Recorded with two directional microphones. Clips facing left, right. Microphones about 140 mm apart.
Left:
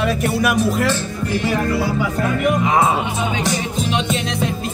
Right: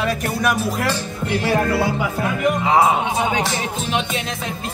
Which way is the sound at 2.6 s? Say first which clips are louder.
Right 3 dB; 25° right (ahead or behind).